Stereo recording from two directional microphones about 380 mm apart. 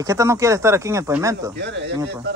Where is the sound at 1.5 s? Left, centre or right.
Right.